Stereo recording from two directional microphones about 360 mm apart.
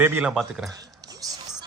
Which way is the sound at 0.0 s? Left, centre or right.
Centre.